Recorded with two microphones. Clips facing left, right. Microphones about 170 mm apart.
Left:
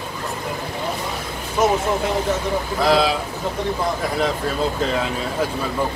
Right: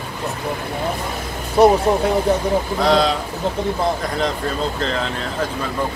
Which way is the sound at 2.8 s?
5° left (ahead or behind).